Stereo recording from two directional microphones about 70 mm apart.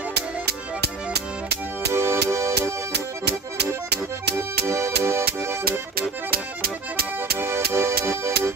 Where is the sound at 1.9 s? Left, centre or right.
Right.